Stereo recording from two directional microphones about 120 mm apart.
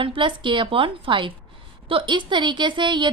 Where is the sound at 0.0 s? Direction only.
45° right (ahead or behind).